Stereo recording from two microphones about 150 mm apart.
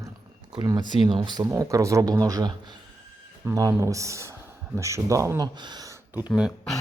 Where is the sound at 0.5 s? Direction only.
25° right (ahead or behind).